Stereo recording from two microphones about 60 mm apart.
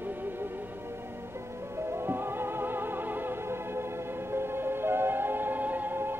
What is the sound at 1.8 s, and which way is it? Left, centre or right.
Music, right.